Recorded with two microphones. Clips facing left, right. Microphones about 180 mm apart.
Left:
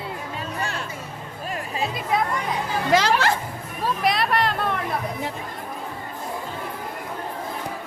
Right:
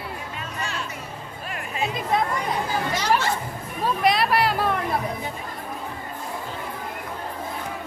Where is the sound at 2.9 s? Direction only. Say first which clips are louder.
Left 6 dB; 90° left.